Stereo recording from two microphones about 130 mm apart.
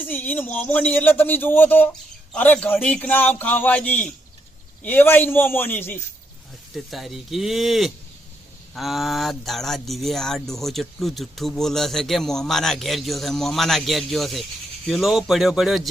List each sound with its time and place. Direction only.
0.0 s speech: 15° left (ahead or behind)
6.7 s speech: centre (ahead or behind)